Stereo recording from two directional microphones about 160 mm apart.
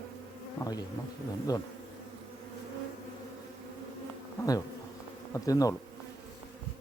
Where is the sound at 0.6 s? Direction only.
25° left (ahead or behind).